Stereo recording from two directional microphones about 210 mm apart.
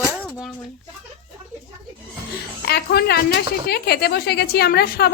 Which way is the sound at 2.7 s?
50° left (ahead or behind).